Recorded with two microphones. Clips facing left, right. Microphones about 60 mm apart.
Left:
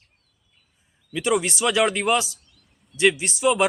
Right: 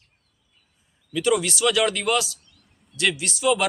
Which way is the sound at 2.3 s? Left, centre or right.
Centre.